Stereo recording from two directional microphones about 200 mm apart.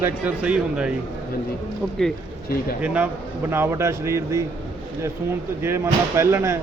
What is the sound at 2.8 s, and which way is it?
A man's voice, 5° right (ahead or behind).